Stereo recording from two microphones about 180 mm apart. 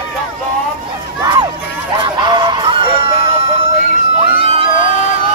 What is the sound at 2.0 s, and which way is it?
Honk, 25° right (ahead or behind).